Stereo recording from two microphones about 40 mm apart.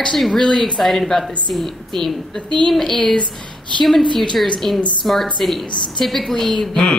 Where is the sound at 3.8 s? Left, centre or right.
Centre.